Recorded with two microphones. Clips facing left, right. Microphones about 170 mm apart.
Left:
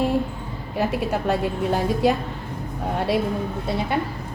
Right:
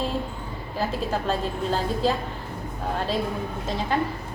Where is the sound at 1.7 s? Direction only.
15° left (ahead or behind).